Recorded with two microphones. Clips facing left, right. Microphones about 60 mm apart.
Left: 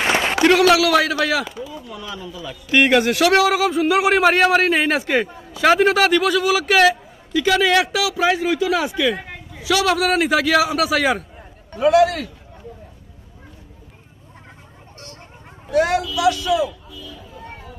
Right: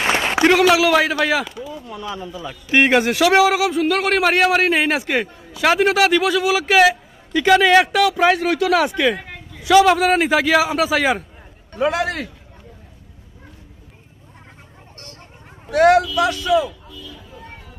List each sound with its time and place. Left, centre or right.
0.4 s a sound: centre
1.0 s a man's voice: centre
1.4 s a man's voice: centre
1.9 s a man's voice: right
3.4 s a man's voice: centre
8.4 s speech: right
9.0 s a sound: centre
9.7 s a man's voice: centre
11.7 s a man's voice: right
15.7 s speech: right
16.2 s a man's voice: right